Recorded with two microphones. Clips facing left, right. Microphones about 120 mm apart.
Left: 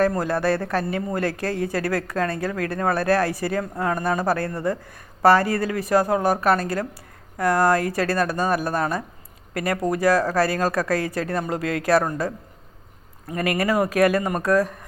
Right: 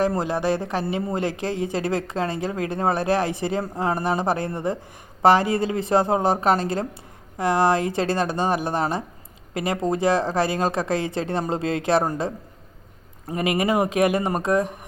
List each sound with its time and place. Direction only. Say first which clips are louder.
0.1 s speech: left 1 dB; 20° right (ahead or behind)
13.3 s speech: even; 20° right (ahead or behind)